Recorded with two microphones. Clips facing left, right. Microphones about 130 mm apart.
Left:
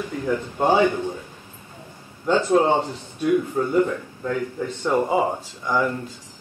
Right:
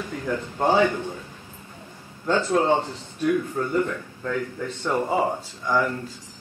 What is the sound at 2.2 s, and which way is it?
Speech, 15° left (ahead or behind).